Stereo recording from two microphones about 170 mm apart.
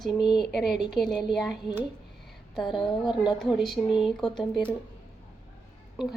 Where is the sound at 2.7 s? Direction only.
25° left (ahead or behind).